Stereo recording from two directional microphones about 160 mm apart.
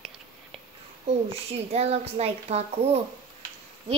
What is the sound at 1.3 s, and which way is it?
Speech, 40° right (ahead or behind).